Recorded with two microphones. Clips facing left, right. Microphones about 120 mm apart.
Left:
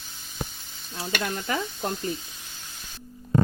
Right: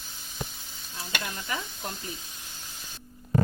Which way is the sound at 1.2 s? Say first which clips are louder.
Left 9 dB; 55° left (ahead or behind).